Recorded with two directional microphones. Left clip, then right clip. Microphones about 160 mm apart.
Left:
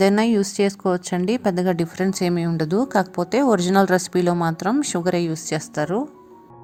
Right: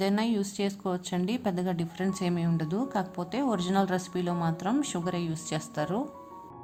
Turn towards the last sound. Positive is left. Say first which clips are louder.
# left 8 dB
turn(degrees=30)  # may be behind; listen again after turning